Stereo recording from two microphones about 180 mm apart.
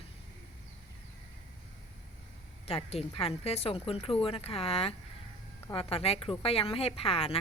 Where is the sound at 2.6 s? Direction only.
35° left (ahead or behind).